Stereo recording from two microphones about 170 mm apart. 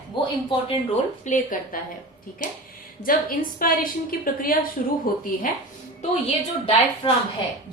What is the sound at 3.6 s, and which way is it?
A woman's voice, 55° left (ahead or behind).